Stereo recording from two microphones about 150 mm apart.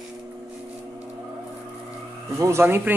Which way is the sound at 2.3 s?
20° right (ahead or behind).